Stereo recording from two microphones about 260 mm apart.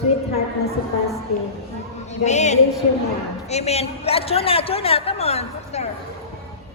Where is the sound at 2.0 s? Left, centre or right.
Left.